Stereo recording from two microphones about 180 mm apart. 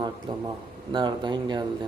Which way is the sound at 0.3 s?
25° right (ahead or behind).